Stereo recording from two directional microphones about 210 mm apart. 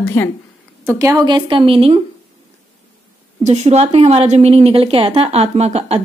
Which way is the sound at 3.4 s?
30° right (ahead or behind).